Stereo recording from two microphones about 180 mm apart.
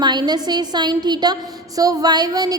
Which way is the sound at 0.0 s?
25° right (ahead or behind).